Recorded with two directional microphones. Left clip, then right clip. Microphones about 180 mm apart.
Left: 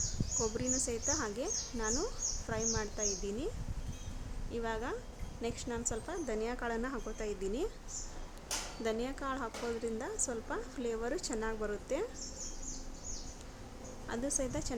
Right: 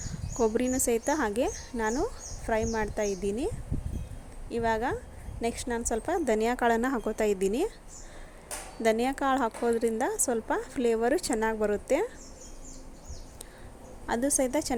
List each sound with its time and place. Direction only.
0.3 s a woman's voice: 35° right (ahead or behind)
4.5 s a woman's voice: 35° right (ahead or behind)
8.8 s a woman's voice: 40° right (ahead or behind)
14.1 s a woman's voice: 35° right (ahead or behind)